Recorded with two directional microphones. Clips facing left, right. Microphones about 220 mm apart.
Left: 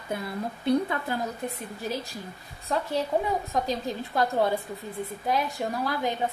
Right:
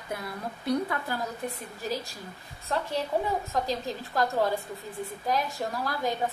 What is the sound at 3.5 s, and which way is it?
Speech, 20° left (ahead or behind).